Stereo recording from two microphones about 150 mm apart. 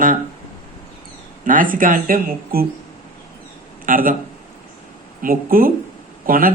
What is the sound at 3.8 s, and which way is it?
Speech, 65° right (ahead or behind).